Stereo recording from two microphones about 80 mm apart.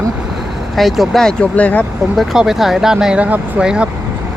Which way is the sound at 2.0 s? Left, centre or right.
Centre.